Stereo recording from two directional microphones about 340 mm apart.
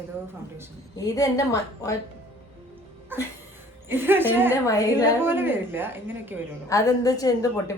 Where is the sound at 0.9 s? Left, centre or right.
Centre.